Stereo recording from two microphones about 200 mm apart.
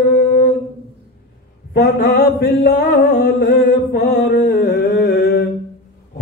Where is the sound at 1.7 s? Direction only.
50° left (ahead or behind).